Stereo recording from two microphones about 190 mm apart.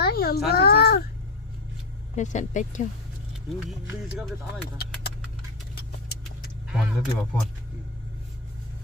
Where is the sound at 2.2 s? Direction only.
40° left (ahead or behind).